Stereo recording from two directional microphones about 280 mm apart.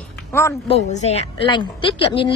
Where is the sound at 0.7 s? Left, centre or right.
Left.